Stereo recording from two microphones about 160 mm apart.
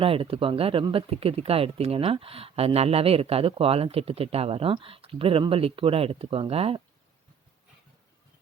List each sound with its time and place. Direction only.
0.0 s speech: 35° right (ahead or behind)